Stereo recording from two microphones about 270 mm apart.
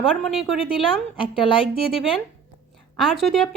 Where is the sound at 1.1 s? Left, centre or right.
Centre.